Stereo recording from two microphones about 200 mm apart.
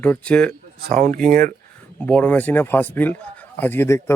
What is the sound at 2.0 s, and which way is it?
Speech, 10° left (ahead or behind).